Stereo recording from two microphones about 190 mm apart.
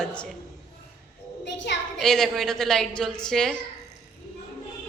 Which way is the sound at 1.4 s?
65° left (ahead or behind).